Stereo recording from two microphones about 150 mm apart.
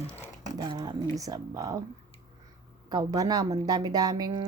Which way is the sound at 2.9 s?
25° right (ahead or behind).